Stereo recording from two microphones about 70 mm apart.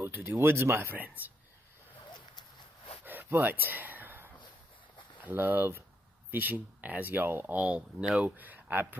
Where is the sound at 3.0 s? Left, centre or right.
Right.